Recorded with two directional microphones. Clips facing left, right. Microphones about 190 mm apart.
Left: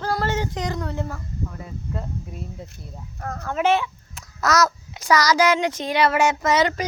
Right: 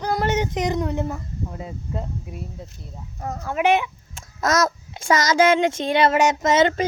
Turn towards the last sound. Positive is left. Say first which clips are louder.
# right 2 dB
turn(degrees=-25)  # may be behind; listen again after turning